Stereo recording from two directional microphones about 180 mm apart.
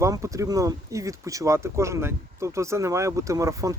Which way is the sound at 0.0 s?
15° right (ahead or behind).